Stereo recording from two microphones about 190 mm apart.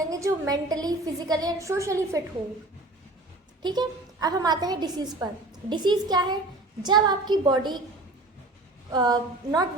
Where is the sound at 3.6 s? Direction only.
20° right (ahead or behind).